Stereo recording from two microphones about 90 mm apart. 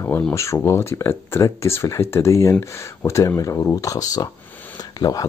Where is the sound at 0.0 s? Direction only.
30° left (ahead or behind).